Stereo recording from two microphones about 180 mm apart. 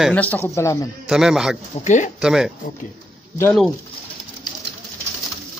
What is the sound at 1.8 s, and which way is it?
Speech, 40° left (ahead or behind).